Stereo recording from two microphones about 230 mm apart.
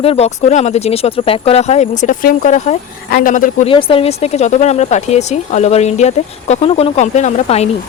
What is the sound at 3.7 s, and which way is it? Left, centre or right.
Speech, left.